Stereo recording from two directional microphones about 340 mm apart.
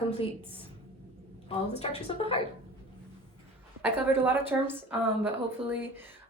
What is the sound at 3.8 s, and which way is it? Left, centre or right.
A woman's voice, centre.